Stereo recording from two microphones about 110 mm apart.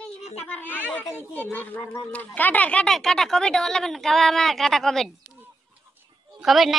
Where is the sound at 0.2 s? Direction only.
70° left (ahead or behind).